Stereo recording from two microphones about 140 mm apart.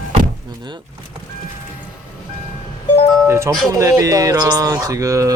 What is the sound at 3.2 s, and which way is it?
Speech, 15° right (ahead or behind).